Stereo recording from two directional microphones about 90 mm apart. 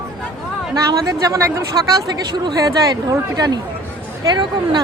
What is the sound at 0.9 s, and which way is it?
Speech, 40° right (ahead or behind).